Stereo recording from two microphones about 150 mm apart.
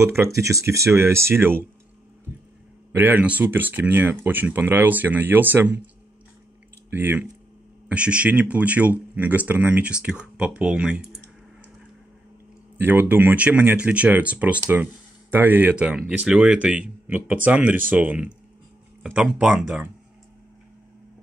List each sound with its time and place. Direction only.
0.0 s speech: 15° right (ahead or behind)
2.9 s speech: 10° right (ahead or behind)
6.9 s speech: 15° right (ahead or behind)
12.7 s speech: 10° right (ahead or behind)